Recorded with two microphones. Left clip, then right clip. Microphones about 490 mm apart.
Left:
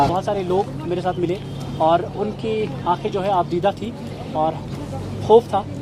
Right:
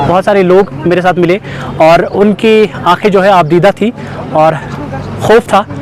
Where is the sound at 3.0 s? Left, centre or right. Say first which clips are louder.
Right 14 dB; right.